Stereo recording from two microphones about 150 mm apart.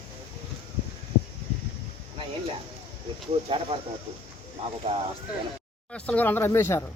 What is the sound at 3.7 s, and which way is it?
Speech, 35° right (ahead or behind).